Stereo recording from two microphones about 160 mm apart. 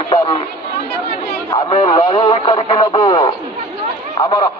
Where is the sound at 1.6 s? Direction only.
30° left (ahead or behind).